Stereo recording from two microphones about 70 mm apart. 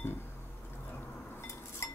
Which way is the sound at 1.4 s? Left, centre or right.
Left.